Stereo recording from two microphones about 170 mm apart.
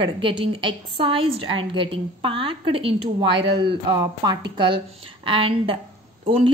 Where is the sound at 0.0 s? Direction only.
30° right (ahead or behind).